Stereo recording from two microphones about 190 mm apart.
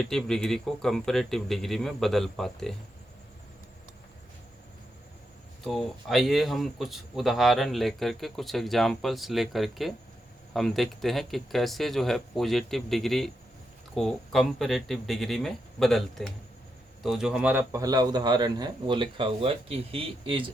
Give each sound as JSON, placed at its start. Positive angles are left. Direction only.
{"t": 0.0, "sound": "speech", "side_deg": 0}
{"t": 5.6, "sound": "a man's voice", "side_deg": 0}